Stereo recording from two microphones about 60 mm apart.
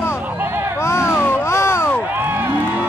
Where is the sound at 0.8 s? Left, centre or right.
Left.